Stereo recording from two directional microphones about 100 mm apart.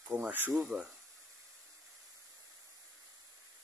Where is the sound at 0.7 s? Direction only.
10° right (ahead or behind).